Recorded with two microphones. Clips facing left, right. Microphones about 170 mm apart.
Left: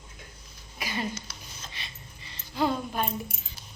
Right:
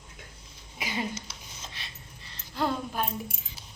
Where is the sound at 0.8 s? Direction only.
20° right (ahead or behind).